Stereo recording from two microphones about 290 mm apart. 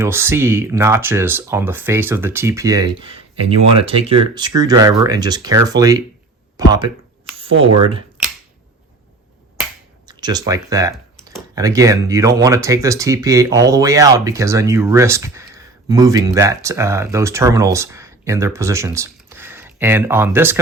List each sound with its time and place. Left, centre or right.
0.0 s speech: centre
10.1 s speech: centre